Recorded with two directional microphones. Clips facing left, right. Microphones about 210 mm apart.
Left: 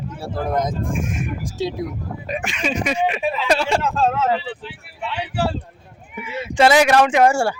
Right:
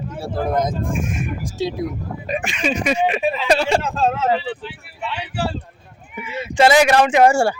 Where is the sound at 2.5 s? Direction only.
45° left (ahead or behind).